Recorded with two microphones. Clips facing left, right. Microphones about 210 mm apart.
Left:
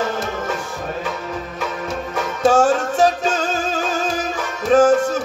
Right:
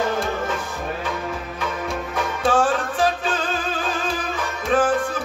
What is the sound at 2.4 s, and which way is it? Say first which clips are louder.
Music: left 5 dB; 45° left (ahead or behind).